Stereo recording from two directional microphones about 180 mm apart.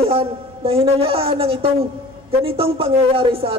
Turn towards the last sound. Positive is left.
turn(degrees=-30)  # may be behind; listen again after turning